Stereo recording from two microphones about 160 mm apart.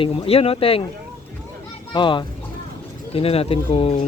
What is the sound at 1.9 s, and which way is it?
Speech, 30° left (ahead or behind).